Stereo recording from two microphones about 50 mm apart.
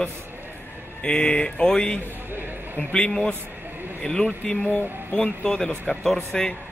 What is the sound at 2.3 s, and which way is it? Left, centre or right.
Speech, right.